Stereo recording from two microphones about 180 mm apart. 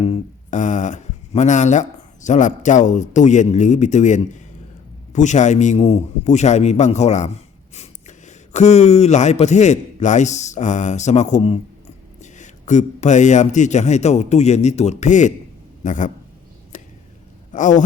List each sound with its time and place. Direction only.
0.0 s a man's voice: 40° left (ahead or behind)
16.7 s chop: 45° left (ahead or behind)
17.5 s a man's voice: 45° left (ahead or behind)